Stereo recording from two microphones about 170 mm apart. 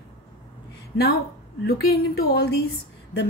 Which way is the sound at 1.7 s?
60° left (ahead or behind).